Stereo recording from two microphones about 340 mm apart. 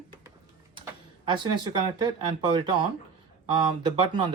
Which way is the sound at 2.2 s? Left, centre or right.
Centre.